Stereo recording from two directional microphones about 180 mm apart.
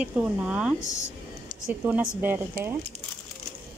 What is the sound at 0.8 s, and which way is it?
Speech, 15° left (ahead or behind).